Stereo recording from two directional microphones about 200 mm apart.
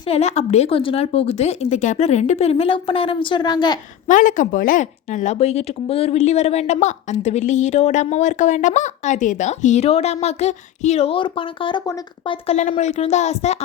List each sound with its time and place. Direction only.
0.1 s speech: 30° left (ahead or behind)
4.0 s speech: 40° left (ahead or behind)
12.5 s speech: 35° left (ahead or behind)